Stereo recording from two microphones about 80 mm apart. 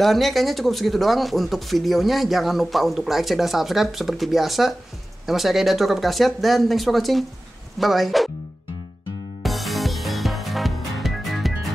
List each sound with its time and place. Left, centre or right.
0.0 s speech: centre
9.4 s music: centre